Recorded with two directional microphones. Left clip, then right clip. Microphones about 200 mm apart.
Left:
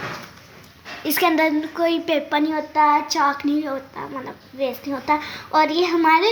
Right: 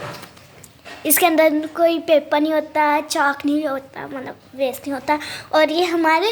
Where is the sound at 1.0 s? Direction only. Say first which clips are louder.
Right 3 dB; 20° right (ahead or behind).